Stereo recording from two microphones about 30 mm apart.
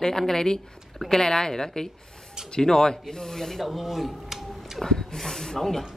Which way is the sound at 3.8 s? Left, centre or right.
Centre.